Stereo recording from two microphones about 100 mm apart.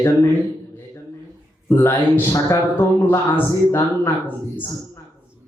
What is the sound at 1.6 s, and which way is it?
A man's voice, 25° left (ahead or behind).